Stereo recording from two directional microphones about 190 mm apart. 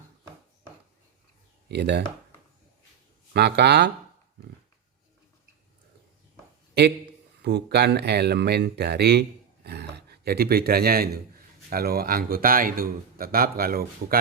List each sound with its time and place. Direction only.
1.7 s speech: 60° right (ahead or behind)
3.3 s speech: 60° right (ahead or behind)
7.4 s speech: 60° right (ahead or behind)